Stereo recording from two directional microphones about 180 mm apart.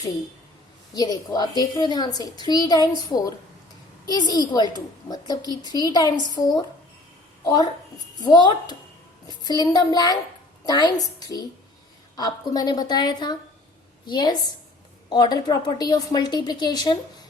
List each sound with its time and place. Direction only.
0.9 s a woman's voice: 20° left (ahead or behind)
7.4 s a woman's voice: 20° left (ahead or behind)